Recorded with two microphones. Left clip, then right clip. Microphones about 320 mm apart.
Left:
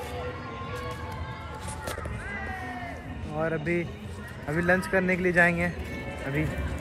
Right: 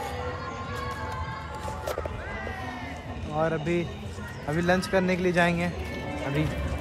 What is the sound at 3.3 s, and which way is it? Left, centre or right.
A man's voice, centre.